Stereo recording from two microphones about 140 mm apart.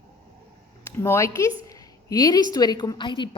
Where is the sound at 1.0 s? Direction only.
20° left (ahead or behind).